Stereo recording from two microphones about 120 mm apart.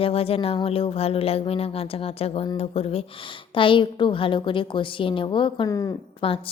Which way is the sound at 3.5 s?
45° left (ahead or behind).